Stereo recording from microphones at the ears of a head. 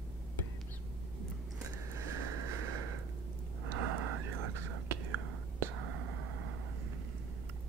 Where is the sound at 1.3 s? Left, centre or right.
Right.